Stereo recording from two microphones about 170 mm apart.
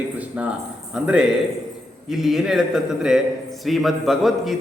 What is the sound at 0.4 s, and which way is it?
A man's voice, 10° right (ahead or behind).